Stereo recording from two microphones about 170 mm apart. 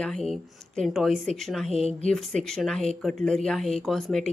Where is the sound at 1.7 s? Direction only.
45° right (ahead or behind).